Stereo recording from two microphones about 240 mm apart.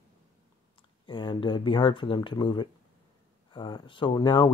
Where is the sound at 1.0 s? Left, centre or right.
Centre.